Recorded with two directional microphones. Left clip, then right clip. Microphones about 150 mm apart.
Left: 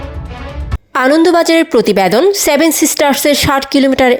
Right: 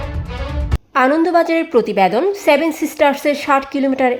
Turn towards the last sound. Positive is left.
turn(degrees=25)  # may be behind; listen again after turning